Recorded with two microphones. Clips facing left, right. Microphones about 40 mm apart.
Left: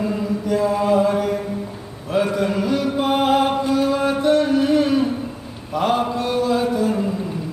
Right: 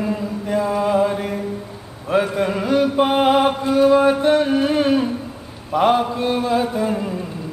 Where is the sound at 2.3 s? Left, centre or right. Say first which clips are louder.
Right 2 dB; right.